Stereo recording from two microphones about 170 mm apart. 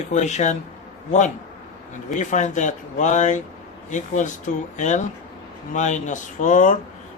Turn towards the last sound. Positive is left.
turn(degrees=50)  # may be behind; listen again after turning